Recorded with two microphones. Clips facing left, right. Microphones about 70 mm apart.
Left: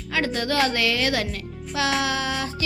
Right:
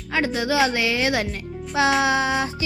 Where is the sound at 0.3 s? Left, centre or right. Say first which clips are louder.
Right 2 dB; centre.